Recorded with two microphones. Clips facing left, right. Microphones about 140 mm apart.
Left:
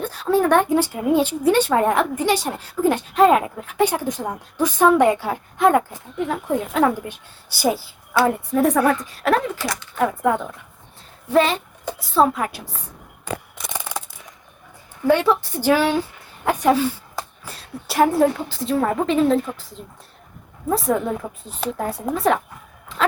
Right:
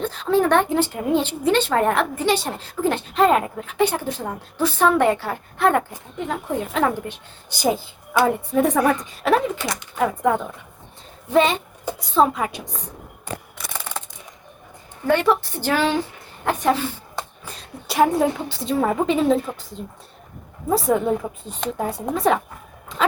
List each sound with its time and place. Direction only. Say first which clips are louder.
0.0 s a woman's voice: even; 10° left (ahead or behind)
9.6 s speech: left 1 dB; 20° right (ahead or behind)
10.0 s a woman's voice: even; centre (ahead or behind)
13.7 s a sound: left 2 dB; 10° left (ahead or behind)
15.0 s a woman's voice: left 1 dB; 10° left (ahead or behind)